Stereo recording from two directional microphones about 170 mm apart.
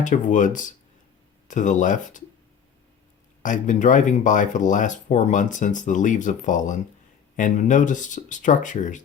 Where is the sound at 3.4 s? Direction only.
50° left (ahead or behind).